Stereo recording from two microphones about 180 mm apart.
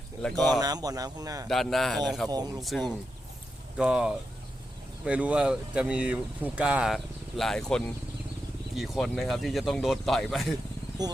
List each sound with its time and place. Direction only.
0.2 s speech: 5° left (ahead or behind)
0.6 s speech: 20° right (ahead or behind)
1.5 s speech: centre (ahead or behind)